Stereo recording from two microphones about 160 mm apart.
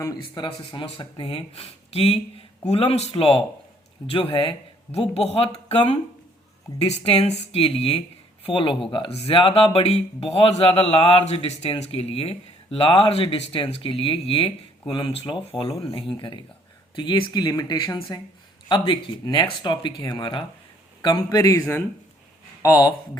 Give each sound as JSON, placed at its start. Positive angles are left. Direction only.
{"t": 0.2, "sound": "a man's voice", "side_deg": 30}